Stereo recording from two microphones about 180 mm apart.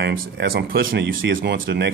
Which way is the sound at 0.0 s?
55° right (ahead or behind).